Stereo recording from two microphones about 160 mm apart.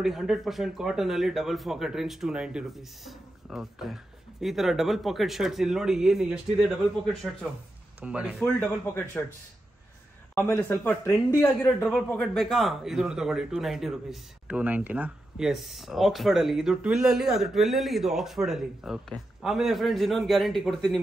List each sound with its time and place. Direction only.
0.0 s a man's voice: centre (ahead or behind)
8.5 s speech: 15° left (ahead or behind)
10.3 s speech: 15° left (ahead or behind)
11.4 s a man's voice: 5° left (ahead or behind)